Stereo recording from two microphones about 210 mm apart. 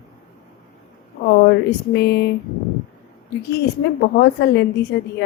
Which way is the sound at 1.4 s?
55° left (ahead or behind).